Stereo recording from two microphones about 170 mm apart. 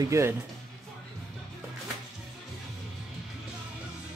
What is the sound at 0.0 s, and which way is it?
Speech, 15° right (ahead or behind).